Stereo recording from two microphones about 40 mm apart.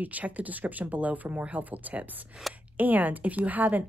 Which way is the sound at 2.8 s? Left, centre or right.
Right.